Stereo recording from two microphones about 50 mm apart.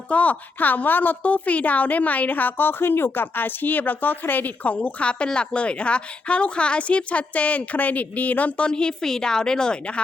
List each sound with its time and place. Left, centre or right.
0.1 s a woman's voice: left
8.6 s a woman's voice: centre